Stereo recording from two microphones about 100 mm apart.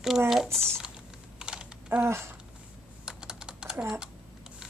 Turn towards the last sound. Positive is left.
turn(degrees=-10)  # may be behind; listen again after turning